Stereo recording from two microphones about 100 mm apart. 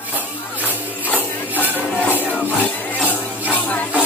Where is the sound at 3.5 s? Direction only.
15° left (ahead or behind).